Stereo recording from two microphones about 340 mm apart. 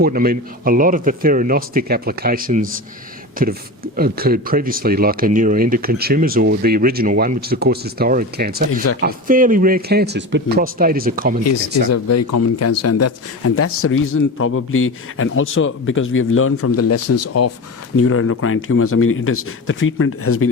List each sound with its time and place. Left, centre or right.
0.0 s speech: right
11.4 s speech: left